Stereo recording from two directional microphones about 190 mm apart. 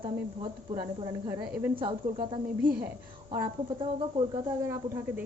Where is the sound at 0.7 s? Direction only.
20° right (ahead or behind).